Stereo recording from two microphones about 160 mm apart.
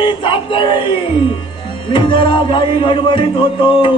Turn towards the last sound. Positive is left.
turn(degrees=30)  # may be behind; listen again after turning